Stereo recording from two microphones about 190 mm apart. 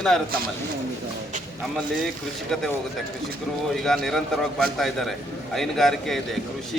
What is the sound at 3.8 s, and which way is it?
A man's voice, centre (ahead or behind).